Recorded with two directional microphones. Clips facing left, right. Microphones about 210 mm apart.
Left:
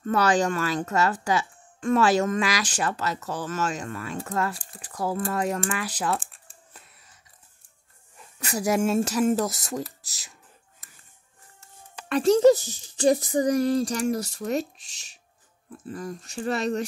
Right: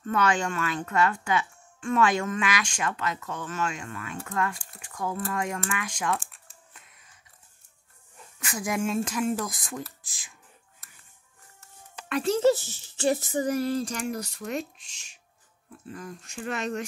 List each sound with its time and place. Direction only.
0.0 s speech: 35° left (ahead or behind)
6.3 s crumpling: 35° left (ahead or behind)
8.4 s speech: 40° left (ahead or behind)
12.1 s speech: 40° left (ahead or behind)